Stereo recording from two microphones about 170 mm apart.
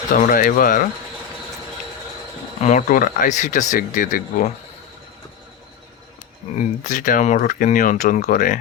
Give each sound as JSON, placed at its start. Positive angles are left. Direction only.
{"t": 0.1, "sound": "speech", "side_deg": 55}
{"t": 2.6, "sound": "speech", "side_deg": 45}
{"t": 6.8, "sound": "speech", "side_deg": 50}